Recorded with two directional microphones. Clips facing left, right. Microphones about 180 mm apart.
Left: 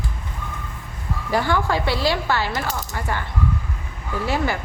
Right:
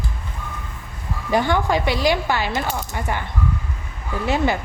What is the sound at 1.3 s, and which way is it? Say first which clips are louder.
Speech: right 2 dB; 20° right (ahead or behind).